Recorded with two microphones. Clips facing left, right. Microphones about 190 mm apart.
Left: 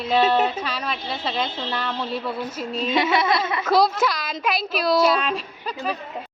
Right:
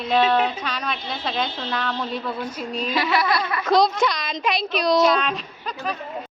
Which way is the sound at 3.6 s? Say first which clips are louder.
Right 2 dB; 5° left (ahead or behind).